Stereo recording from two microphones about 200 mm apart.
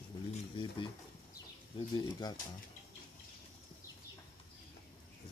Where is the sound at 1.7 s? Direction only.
25° left (ahead or behind).